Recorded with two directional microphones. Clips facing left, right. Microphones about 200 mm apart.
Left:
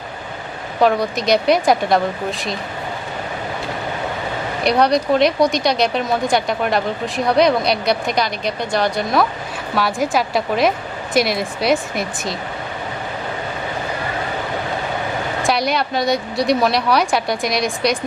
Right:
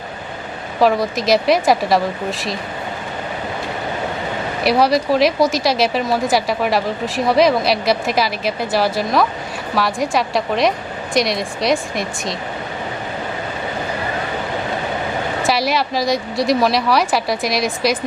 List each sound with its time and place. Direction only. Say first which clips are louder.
0.8 s speech: right 1 dB; centre (ahead or behind)
4.6 s speech: even; 5° right (ahead or behind)
15.4 s speech: even; centre (ahead or behind)